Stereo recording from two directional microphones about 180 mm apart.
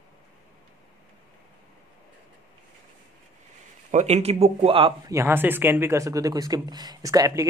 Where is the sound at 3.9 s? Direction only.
40° right (ahead or behind).